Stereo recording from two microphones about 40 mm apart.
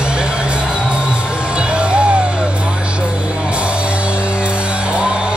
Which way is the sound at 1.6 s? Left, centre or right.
Right.